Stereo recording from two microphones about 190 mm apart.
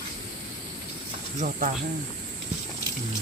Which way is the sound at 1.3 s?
40° right (ahead or behind).